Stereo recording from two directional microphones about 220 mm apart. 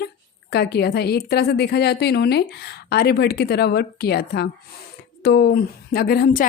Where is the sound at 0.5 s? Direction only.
50° left (ahead or behind).